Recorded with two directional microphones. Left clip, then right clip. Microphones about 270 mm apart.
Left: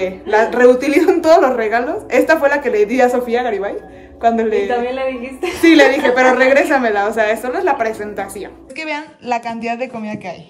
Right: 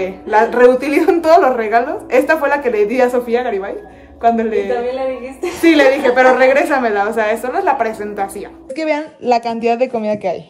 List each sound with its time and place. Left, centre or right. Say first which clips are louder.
0.0 s a man's voice: right 1 dB; centre
8.7 s a woman's voice: right 6 dB; centre
9.2 s speech: right 6 dB; left